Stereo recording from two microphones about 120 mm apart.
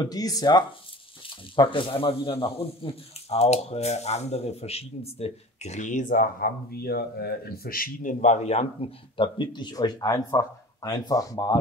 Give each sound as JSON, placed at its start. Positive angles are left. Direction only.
{"t": 0.0, "sound": "speech", "side_deg": 30}
{"t": 8.0, "sound": "speech", "side_deg": 90}